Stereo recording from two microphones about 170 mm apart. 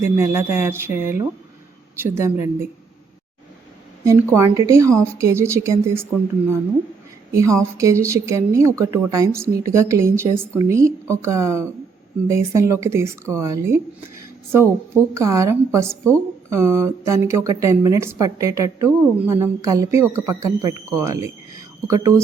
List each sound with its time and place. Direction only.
0.0 s a woman's voice: 15° right (ahead or behind)
4.0 s a woman's voice: 15° right (ahead or behind)
7.3 s a woman's voice: 20° right (ahead or behind)
15.1 s a woman's voice: 20° right (ahead or behind)